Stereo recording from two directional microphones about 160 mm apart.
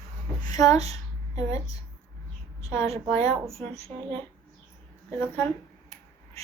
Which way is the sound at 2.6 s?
40° right (ahead or behind).